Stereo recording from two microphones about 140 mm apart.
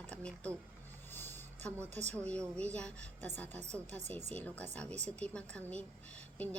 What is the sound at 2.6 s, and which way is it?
A woman's voice, 10° left (ahead or behind).